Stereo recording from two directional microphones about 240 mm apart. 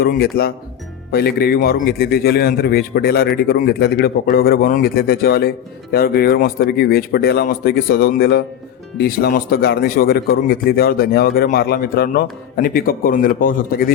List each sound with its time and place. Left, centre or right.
0.0 s a man's voice: left